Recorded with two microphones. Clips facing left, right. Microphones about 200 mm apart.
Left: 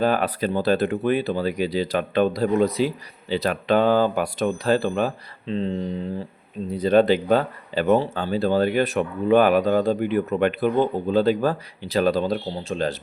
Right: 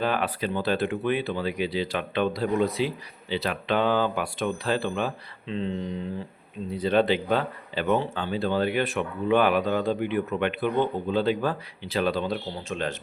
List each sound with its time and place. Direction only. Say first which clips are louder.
0.0 s speech: left 5 dB; 40° left (ahead or behind)